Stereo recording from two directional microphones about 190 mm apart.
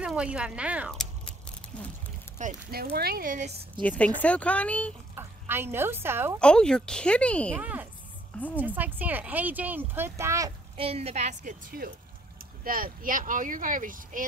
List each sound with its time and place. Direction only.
0.0 s speech: 5° right (ahead or behind)
2.3 s speech: 45° right (ahead or behind)
3.8 s speech: 5° left (ahead or behind)
5.1 s speech: 10° right (ahead or behind)
6.4 s speech: 5° left (ahead or behind)
7.5 s speech: 10° right (ahead or behind)
10.8 s a woman's voice: 30° right (ahead or behind)